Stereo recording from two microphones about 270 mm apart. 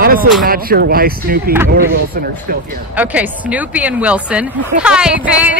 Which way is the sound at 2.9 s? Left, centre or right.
Centre.